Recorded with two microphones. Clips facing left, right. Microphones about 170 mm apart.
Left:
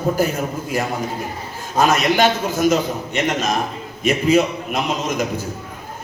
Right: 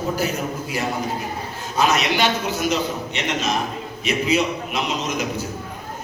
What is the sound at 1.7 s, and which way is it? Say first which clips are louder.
A man's voice: left 4 dB; 50° left (ahead or behind).